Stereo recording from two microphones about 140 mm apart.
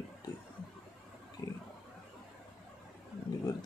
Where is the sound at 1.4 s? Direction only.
25° left (ahead or behind).